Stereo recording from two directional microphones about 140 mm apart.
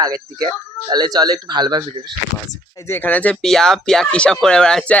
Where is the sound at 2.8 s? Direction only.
15° left (ahead or behind).